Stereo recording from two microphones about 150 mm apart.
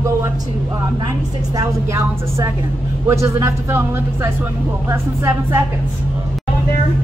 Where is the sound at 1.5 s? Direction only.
20° right (ahead or behind).